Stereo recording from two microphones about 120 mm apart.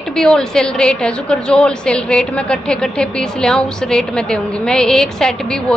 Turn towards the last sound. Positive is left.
turn(degrees=5)  # may be behind; listen again after turning